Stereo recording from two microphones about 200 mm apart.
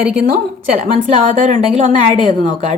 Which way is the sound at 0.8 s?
35° right (ahead or behind).